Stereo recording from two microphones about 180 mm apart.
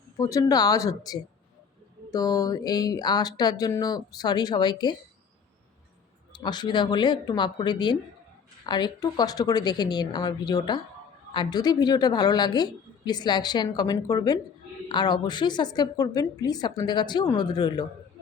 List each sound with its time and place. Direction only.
0.2 s a woman's voice: 20° left (ahead or behind)
6.3 s a woman's voice: 25° left (ahead or behind)